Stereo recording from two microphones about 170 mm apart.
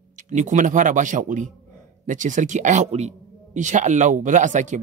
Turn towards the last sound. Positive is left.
turn(degrees=-45)  # may be behind; listen again after turning